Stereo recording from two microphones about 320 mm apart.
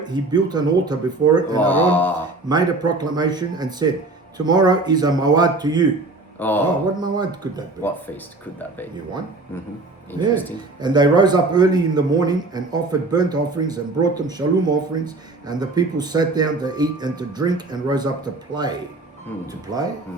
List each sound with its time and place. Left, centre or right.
0.0 s a man's voice: centre
1.6 s speech: centre
2.5 s a man's voice: centre
6.4 s speech: centre
7.0 s a man's voice: centre
7.8 s speech: centre
10.8 s a man's voice: centre